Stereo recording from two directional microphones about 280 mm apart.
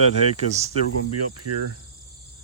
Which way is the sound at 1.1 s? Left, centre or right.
Right.